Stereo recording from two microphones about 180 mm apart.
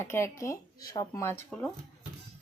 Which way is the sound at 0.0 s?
15° left (ahead or behind).